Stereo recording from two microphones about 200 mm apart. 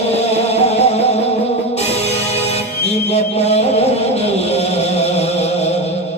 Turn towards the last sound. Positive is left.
turn(degrees=30)  # may be behind; listen again after turning